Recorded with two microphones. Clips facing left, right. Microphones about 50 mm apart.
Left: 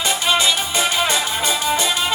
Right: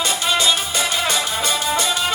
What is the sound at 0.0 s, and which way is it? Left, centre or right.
Music, left.